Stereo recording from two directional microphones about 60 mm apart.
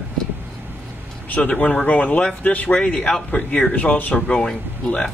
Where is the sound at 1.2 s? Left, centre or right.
Left.